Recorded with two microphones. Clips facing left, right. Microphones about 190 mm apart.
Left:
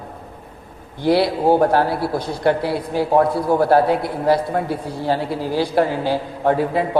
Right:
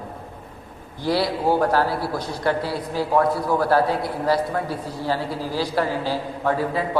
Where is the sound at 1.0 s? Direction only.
60° left (ahead or behind).